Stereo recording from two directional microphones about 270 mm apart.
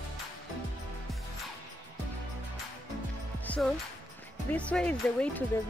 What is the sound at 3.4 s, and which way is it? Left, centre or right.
Music, centre.